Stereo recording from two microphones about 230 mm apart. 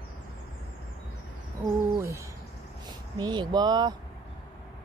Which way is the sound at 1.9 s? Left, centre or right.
Centre.